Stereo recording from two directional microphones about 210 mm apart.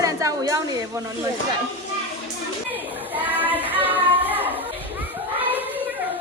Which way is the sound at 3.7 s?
10° right (ahead or behind).